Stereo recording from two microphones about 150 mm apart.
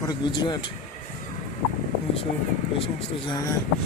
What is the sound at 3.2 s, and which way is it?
Speech, 25° left (ahead or behind).